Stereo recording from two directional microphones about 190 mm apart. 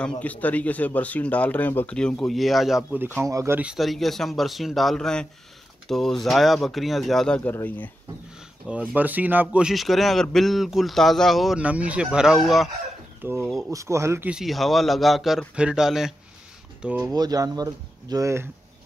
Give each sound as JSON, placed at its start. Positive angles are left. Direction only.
{"t": 0.2, "sound": "speech", "side_deg": 10}
{"t": 3.2, "sound": "speech", "side_deg": -15}
{"t": 8.6, "sound": "speech", "side_deg": -5}
{"t": 17.0, "sound": "speech", "side_deg": -20}